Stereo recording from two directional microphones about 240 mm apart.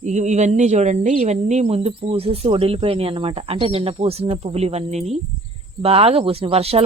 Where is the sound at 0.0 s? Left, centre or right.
Right.